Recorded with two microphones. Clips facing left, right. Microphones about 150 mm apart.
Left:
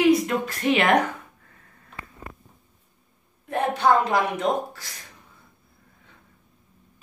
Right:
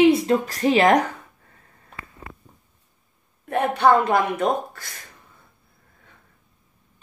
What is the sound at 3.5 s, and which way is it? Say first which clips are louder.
A woman's voice: right 3 dB; 65° right (ahead or behind).